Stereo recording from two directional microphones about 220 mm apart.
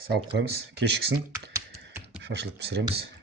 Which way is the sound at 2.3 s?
50° right (ahead or behind).